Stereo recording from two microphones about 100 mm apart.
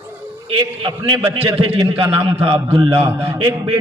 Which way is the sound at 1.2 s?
70° right (ahead or behind).